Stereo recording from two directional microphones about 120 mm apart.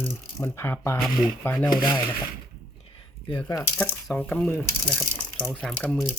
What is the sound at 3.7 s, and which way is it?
Speech, 15° left (ahead or behind).